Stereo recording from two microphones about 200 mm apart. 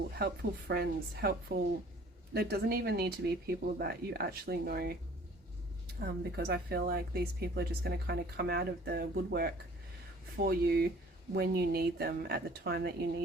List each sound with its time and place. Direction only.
0.2 s a woman's voice: 50° right (ahead or behind)
6.0 s a woman's voice: 50° right (ahead or behind)